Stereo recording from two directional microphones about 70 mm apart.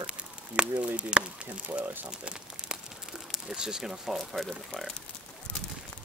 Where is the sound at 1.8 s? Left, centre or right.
Right.